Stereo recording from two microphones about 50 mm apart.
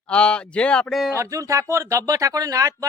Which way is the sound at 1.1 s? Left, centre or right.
Right.